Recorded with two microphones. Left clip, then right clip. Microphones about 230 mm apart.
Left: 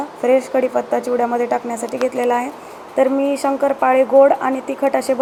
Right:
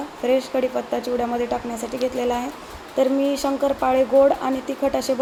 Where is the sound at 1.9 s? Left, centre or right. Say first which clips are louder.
Left 5 dB; centre.